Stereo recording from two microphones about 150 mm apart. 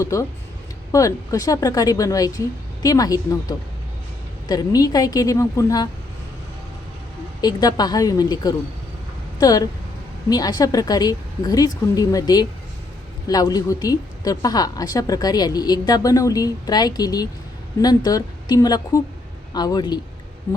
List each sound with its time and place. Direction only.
0.0 s a woman's voice: 20° left (ahead or behind)
7.4 s a woman's voice: 25° left (ahead or behind)
20.5 s a sound: 20° left (ahead or behind)